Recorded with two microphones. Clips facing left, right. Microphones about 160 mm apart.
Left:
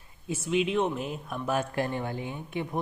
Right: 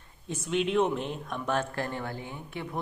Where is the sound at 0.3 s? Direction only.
5° left (ahead or behind).